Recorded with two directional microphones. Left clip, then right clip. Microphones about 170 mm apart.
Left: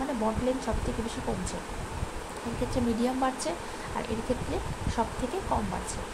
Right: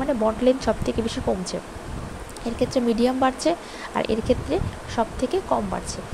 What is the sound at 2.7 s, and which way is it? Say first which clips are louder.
Speech: right 7 dB; 40° right (ahead or behind).